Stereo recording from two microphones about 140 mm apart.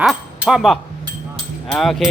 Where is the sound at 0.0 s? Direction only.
5° right (ahead or behind).